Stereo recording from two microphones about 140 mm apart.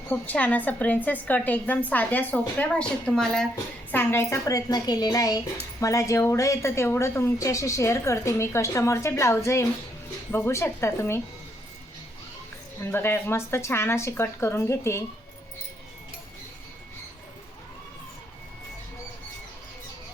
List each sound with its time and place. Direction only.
0.1 s a woman's voice: 10° left (ahead or behind)
3.9 s a woman's voice: 20° left (ahead or behind)
12.8 s a woman's voice: 15° left (ahead or behind)